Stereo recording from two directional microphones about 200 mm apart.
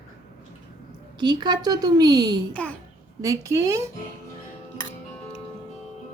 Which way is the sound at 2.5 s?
5° left (ahead or behind).